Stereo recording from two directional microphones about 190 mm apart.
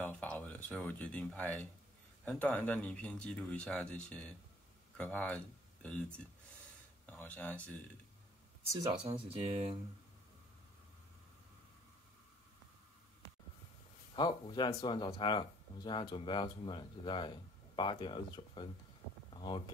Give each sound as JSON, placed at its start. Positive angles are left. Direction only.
{"t": 0.0, "sound": "speech", "side_deg": 10}
{"t": 7.1, "sound": "speech", "side_deg": 10}
{"t": 9.0, "sound": "speech", "side_deg": -30}
{"t": 14.1, "sound": "speech", "side_deg": 25}